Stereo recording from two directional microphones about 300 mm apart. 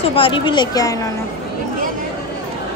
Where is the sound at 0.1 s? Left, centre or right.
Centre.